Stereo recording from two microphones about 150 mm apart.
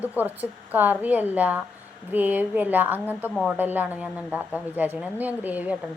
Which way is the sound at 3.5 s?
10° right (ahead or behind).